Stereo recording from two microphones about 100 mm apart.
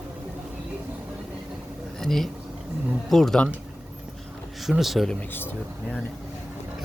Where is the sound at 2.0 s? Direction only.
5° left (ahead or behind).